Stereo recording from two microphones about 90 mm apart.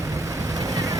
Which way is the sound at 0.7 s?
40° right (ahead or behind).